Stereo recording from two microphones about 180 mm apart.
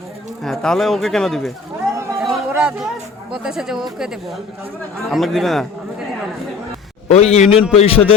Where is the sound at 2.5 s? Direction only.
5° right (ahead or behind).